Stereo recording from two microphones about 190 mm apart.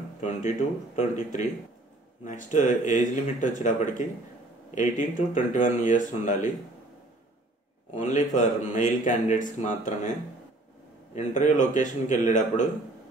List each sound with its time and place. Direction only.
0.2 s speech: 40° left (ahead or behind)
7.9 s speech: 40° left (ahead or behind)
11.1 s speech: 40° left (ahead or behind)